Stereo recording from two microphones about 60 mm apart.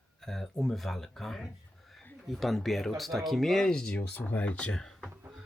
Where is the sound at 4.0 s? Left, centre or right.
Left.